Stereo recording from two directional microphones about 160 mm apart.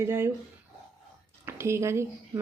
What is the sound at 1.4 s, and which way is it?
A woman's voice, 15° right (ahead or behind).